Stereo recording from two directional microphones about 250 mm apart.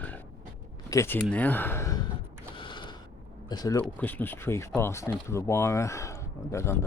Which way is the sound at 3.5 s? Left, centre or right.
Centre.